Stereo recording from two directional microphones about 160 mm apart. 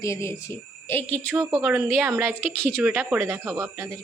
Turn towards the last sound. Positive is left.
turn(degrees=-20)  # may be behind; listen again after turning